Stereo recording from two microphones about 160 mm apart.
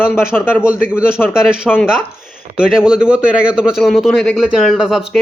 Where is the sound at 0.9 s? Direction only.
5° right (ahead or behind).